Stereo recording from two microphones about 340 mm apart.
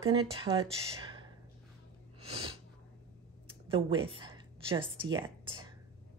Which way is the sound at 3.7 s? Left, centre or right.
Centre.